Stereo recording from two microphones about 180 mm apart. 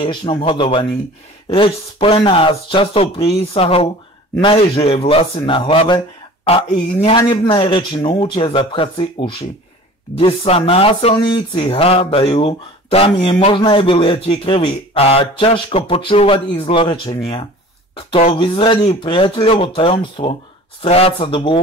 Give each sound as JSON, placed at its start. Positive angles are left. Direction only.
{"t": 0.0, "sound": "speech", "side_deg": 25}